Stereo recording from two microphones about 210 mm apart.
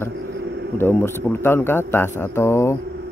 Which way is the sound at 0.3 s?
50° right (ahead or behind).